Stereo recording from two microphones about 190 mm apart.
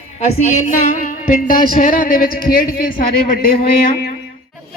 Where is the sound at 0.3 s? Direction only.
40° left (ahead or behind).